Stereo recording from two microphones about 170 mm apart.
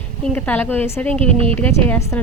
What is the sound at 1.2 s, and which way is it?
Speech, 35° right (ahead or behind).